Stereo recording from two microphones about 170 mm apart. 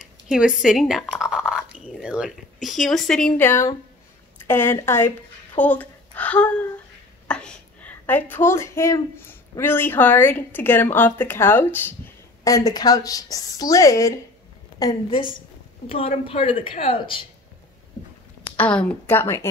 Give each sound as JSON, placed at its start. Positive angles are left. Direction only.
{"t": 0.3, "sound": "a woman's voice", "side_deg": -5}
{"t": 15.9, "sound": "a woman's voice", "side_deg": 35}
{"t": 18.6, "sound": "a woman's voice", "side_deg": 5}